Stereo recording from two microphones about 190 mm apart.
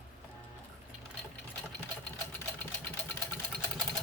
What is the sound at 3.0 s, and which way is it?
Engine, 10° left (ahead or behind).